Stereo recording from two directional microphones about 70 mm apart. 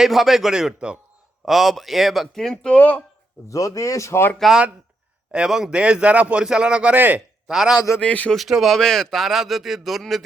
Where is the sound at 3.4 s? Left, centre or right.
Left.